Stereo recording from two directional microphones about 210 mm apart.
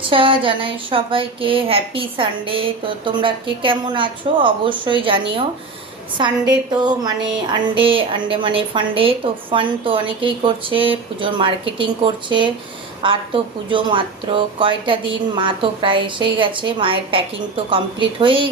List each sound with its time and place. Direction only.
0.0 s a woman's voice: 25° right (ahead or behind)